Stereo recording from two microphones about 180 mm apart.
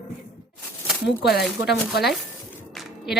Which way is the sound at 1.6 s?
75° left (ahead or behind).